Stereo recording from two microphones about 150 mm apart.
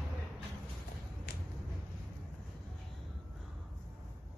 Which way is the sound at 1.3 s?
90° left.